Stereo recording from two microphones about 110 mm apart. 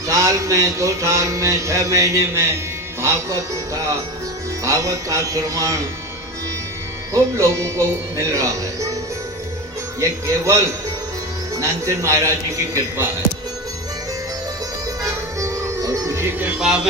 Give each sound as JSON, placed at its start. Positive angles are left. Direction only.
{"t": 0.1, "sound": "mantra", "side_deg": -30}
{"t": 7.1, "sound": "mantra", "side_deg": -25}
{"t": 10.0, "sound": "mantra", "side_deg": -25}
{"t": 15.0, "sound": "music", "side_deg": -30}
{"t": 16.6, "sound": "speech", "side_deg": -5}